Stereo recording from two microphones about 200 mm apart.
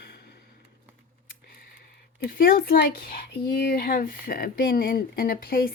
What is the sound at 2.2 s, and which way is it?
Speech, 50° left (ahead or behind).